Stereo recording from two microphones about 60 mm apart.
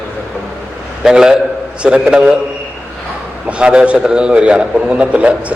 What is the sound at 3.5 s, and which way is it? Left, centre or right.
A man's voice, centre.